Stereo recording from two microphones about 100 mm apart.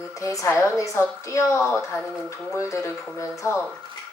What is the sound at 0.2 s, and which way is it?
A woman's voice, 30° left (ahead or behind).